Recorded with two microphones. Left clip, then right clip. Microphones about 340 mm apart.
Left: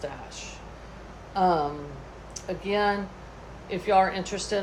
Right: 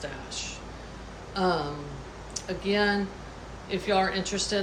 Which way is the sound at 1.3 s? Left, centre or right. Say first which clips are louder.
Left 4 dB; centre.